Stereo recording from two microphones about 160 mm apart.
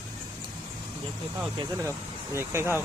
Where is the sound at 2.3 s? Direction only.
15° right (ahead or behind).